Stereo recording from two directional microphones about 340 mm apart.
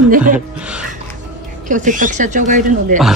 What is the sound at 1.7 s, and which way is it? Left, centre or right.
Speech, right.